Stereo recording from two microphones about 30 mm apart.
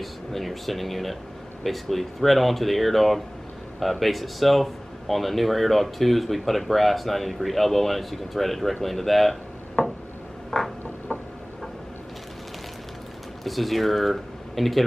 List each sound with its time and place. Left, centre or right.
0.0 s speech: centre
9.8 s a sound: centre
13.4 s speech: centre